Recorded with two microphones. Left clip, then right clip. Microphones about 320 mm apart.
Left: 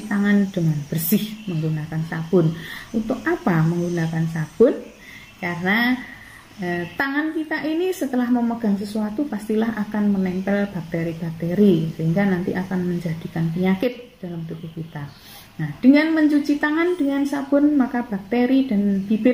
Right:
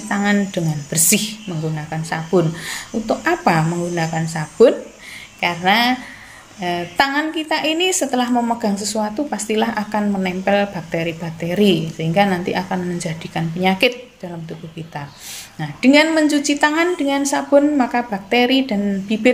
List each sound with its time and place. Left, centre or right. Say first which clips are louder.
0.1 s a woman's voice: right 3 dB; right
15.8 s a woman's voice: right 3 dB; right